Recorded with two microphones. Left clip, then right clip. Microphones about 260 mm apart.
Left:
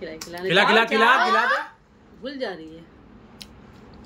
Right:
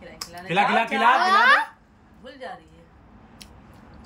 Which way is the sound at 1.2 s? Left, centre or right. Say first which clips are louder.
Right 3 dB; right.